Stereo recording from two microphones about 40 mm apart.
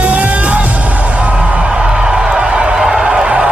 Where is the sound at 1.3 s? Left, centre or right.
Centre.